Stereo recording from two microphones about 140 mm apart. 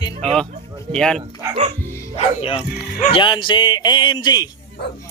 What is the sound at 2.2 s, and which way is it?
Speech, 50° left (ahead or behind).